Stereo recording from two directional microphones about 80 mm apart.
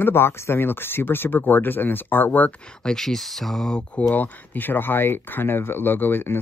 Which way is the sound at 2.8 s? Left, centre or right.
Centre.